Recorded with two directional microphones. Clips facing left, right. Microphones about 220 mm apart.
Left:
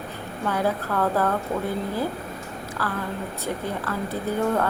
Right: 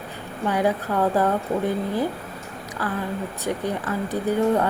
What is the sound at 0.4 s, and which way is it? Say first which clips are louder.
Speech: right 3 dB; 15° right (ahead or behind).